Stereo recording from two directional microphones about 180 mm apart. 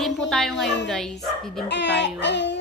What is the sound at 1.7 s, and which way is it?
Child singing, 70° left (ahead or behind).